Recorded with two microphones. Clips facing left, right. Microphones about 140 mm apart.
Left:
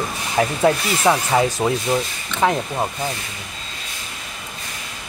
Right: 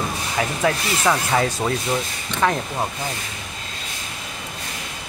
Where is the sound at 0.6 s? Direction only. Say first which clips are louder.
Left 3 dB; 15° left (ahead or behind).